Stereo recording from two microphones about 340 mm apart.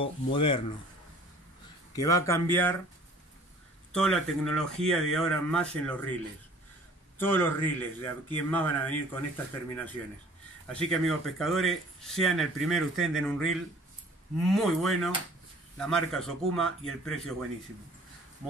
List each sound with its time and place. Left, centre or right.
0.0 s a man's voice: centre
2.0 s a man's voice: centre
3.9 s speech: centre
7.2 s speech: centre
10.7 s speech: centre